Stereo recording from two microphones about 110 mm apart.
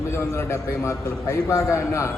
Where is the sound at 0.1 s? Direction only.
25° left (ahead or behind).